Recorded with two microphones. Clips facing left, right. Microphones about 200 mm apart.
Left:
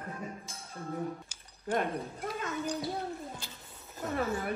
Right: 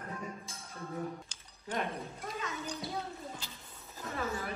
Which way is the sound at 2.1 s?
50° left (ahead or behind).